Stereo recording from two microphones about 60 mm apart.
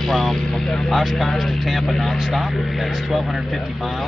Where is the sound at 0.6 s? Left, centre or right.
Centre.